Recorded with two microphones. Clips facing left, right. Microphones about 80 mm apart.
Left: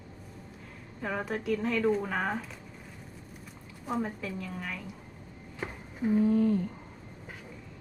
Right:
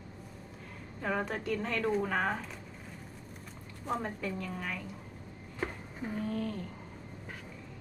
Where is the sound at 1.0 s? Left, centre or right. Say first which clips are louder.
Even; centre.